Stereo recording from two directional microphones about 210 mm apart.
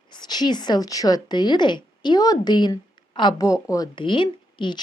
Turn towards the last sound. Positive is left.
turn(degrees=20)  # may be behind; listen again after turning